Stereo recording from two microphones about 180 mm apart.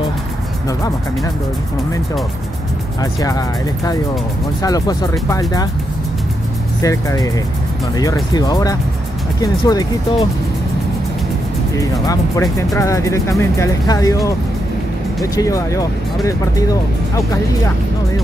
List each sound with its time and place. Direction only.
3.0 s speech: 20° left (ahead or behind)
6.8 s speech: 20° left (ahead or behind)
11.7 s speech: 20° left (ahead or behind)
15.3 s speech: 20° left (ahead or behind)